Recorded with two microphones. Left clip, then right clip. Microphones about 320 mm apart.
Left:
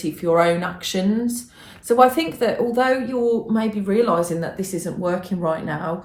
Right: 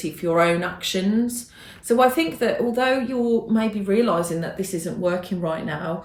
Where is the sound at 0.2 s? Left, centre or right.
Centre.